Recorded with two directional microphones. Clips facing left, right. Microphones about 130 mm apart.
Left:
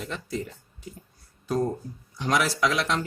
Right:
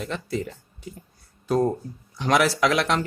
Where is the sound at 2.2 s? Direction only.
65° right (ahead or behind).